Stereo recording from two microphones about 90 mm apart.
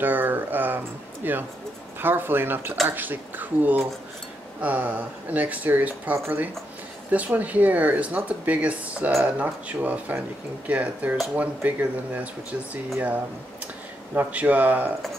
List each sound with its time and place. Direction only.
0.0 s speech: 20° right (ahead or behind)
14.1 s speech: 20° right (ahead or behind)